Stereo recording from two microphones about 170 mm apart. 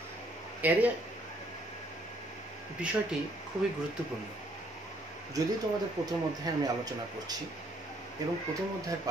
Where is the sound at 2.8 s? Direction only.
5° right (ahead or behind).